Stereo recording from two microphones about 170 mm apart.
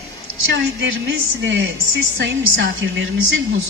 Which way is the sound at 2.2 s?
90° right.